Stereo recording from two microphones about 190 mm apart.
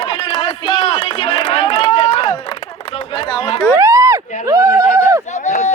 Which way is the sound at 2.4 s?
30° left (ahead or behind).